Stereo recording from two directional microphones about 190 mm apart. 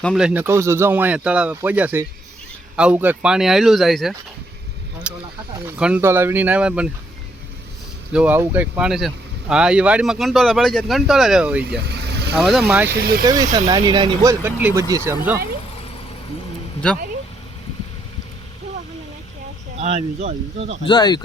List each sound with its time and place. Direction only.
0.0 s speech: centre (ahead or behind)
5.1 s a sound: 5° right (ahead or behind)
5.8 s speech: 10° right (ahead or behind)
8.1 s speech: 10° right (ahead or behind)
11.9 s vehicle: 60° right (ahead or behind)
12.4 s speech: centre (ahead or behind)
12.9 s speech: 55° right (ahead or behind)
13.2 s speech: 20° right (ahead or behind)
14.4 s speech: 15° right (ahead or behind)
19.8 s speech: 35° right (ahead or behind)
20.8 s speech: 25° left (ahead or behind)